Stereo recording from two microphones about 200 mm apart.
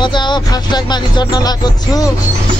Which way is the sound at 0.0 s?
20° left (ahead or behind).